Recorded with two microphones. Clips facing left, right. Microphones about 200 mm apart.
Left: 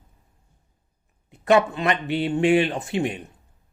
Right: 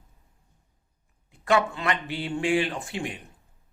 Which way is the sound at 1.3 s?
20° left (ahead or behind).